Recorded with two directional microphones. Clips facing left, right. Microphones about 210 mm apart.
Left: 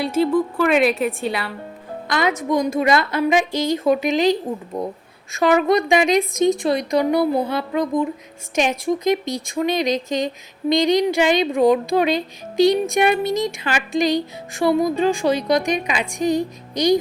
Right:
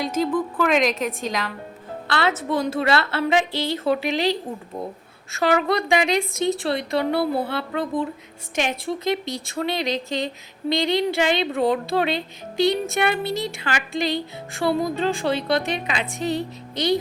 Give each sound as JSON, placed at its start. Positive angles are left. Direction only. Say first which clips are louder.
{"t": 0.3, "sound": "speech", "louder": "left 2 dB", "side_deg": 10}